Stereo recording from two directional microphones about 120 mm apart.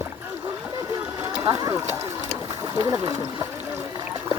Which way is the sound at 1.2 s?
30° right (ahead or behind).